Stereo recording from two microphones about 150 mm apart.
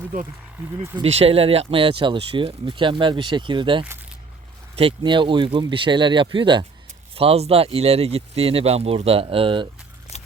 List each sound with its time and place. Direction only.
1.0 s speech: 40° right (ahead or behind)